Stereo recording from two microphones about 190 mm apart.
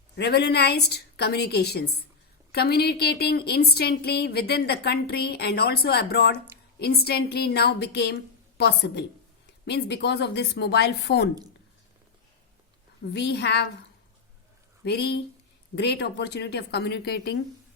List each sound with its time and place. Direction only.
0.2 s a woman's voice: 60° left (ahead or behind)
13.0 s a woman's voice: 65° left (ahead or behind)
14.8 s a woman's voice: 60° left (ahead or behind)